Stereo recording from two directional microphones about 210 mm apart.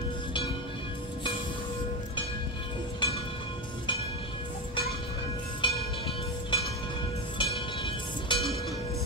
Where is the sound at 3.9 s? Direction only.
25° left (ahead or behind).